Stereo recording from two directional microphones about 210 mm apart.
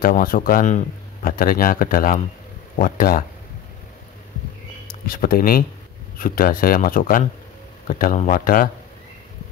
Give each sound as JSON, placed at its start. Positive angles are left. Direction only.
{"t": 0.0, "sound": "a man's voice", "side_deg": 40}
{"t": 5.0, "sound": "a man's voice", "side_deg": 45}